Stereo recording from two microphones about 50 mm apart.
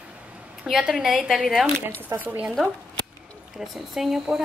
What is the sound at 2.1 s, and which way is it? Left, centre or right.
Speech, right.